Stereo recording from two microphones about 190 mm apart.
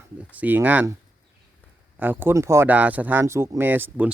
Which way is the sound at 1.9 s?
10° right (ahead or behind).